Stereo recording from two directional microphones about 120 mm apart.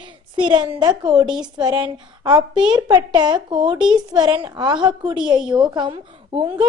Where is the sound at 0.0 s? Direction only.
40° right (ahead or behind).